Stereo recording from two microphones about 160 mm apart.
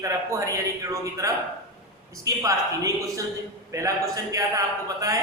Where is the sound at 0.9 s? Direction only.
20° right (ahead or behind).